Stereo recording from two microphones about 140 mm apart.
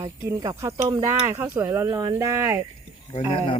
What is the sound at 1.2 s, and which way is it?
Speech, 15° right (ahead or behind).